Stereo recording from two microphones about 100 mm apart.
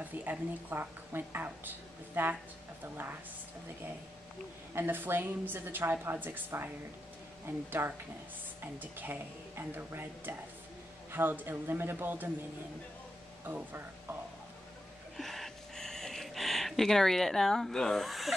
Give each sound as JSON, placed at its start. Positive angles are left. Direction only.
{"t": 0.0, "sound": "a woman's voice", "side_deg": -15}
{"t": 4.7, "sound": "a woman's voice", "side_deg": -20}
{"t": 7.8, "sound": "a woman's voice", "side_deg": -20}
{"t": 15.1, "sound": "a sound", "side_deg": 0}